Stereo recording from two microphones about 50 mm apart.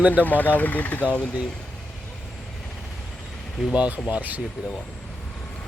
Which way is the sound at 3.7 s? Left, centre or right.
Right.